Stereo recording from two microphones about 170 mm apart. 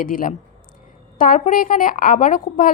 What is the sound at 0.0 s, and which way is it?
A woman's voice, 55° left (ahead or behind).